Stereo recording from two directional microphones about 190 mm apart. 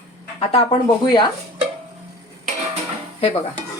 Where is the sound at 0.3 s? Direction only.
35° left (ahead or behind).